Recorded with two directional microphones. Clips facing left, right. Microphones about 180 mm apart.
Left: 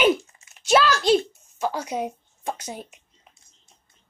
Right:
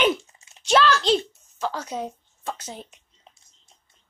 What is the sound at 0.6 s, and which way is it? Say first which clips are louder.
Speech: left 1 dB; 10° left (ahead or behind).